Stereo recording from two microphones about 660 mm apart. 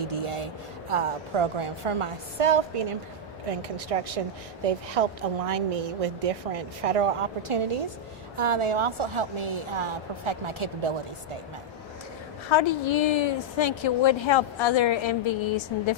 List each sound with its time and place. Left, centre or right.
0.0 s a woman's voice: right
12.5 s a woman's voice: left